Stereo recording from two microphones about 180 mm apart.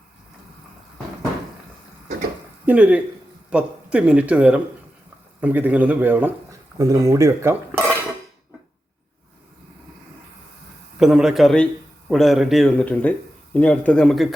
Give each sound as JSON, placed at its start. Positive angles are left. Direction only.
{"t": 2.6, "sound": "speech", "side_deg": -10}
{"t": 11.0, "sound": "a man's voice", "side_deg": -5}